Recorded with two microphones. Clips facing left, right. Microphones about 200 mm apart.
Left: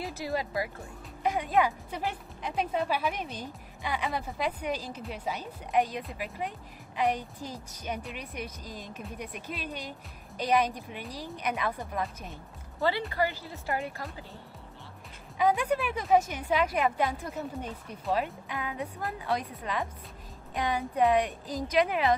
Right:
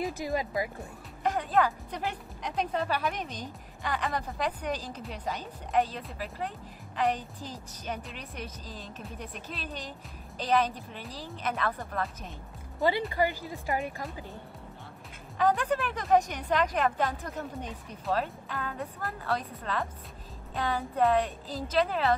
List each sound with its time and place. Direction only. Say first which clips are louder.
0.0 s speech: right 2 dB; 15° right (ahead or behind)
1.2 s speech: even; 10° left (ahead or behind)
13.1 s speech: right 2 dB; 15° right (ahead or behind)
15.3 s speech: even; 10° left (ahead or behind)